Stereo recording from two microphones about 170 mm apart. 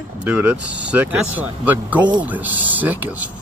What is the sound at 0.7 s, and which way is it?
Speech, 90° right.